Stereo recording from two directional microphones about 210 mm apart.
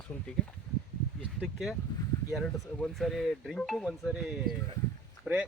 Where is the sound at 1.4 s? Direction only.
Centre (ahead or behind).